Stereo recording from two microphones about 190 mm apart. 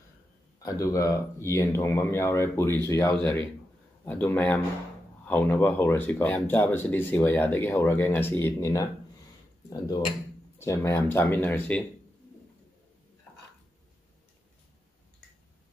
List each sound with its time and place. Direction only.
0.6 s speech: 20° left (ahead or behind)